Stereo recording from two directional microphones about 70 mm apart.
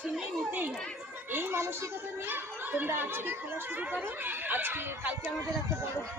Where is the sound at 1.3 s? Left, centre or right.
Right.